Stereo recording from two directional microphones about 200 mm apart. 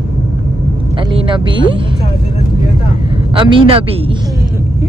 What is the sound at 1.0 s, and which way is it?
Speech, 25° right (ahead or behind).